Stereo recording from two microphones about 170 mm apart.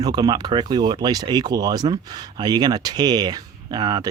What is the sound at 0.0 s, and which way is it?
Speech, 25° right (ahead or behind).